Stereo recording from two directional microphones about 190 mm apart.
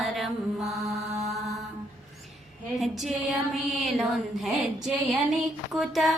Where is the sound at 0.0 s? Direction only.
Centre (ahead or behind).